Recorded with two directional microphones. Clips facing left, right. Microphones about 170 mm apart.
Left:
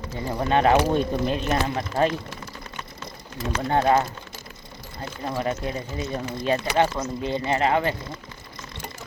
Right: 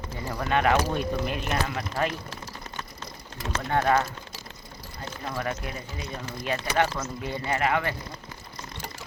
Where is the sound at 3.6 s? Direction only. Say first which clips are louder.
Left 3 dB; 25° left (ahead or behind).